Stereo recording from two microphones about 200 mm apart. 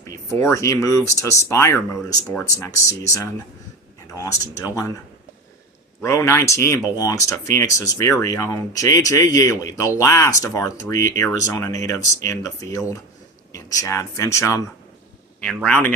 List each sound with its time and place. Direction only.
0.1 s speech: 15° left (ahead or behind)
6.0 s speech: 15° left (ahead or behind)